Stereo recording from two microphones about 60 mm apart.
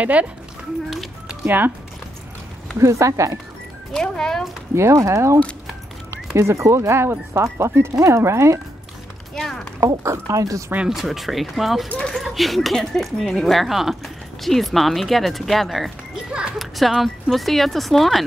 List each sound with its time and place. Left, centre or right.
0.0 s speech: right
1.4 s speech: right
2.8 s a woman's voice: right
3.9 s speech: centre
4.7 s a woman's voice: right
9.3 s speech: centre
9.8 s a woman's voice: right
10.9 s speech: centre
16.3 s children playing: centre
16.5 s speech: centre